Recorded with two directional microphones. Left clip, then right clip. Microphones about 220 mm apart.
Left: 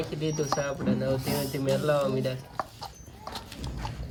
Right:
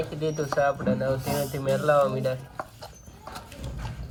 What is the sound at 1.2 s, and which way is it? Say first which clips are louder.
Speech: right 2 dB; 40° left (ahead or behind).